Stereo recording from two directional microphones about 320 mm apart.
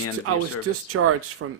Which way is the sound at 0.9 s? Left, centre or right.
Right.